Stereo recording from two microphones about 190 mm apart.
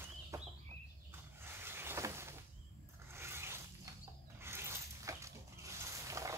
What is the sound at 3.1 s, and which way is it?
Zipper, 15° right (ahead or behind).